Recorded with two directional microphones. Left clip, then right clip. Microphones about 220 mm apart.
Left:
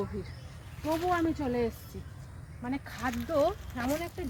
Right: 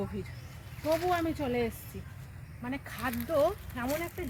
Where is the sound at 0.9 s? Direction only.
40° right (ahead or behind).